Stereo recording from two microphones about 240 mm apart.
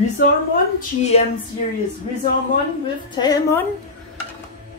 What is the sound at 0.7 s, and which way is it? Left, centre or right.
Speech, left.